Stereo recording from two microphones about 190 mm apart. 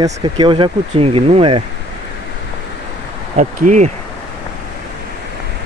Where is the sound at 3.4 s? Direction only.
40° right (ahead or behind).